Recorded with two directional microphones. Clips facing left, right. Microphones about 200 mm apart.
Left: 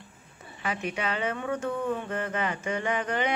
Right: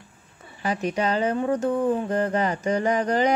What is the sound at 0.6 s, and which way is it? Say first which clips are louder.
Speech: right 7 dB; 35° right (ahead or behind).